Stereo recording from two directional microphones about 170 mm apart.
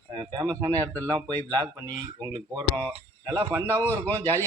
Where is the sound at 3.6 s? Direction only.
10° left (ahead or behind).